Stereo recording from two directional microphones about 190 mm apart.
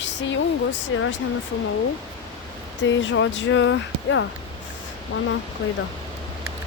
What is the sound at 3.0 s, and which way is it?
Speech, 80° left.